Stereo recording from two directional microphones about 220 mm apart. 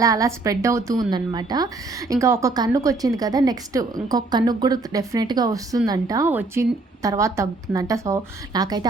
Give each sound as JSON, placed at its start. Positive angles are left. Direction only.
{"t": 0.0, "sound": "a woman's voice", "side_deg": -15}